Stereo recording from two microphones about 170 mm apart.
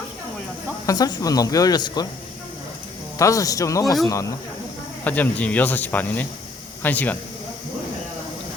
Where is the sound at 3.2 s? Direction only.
20° left (ahead or behind).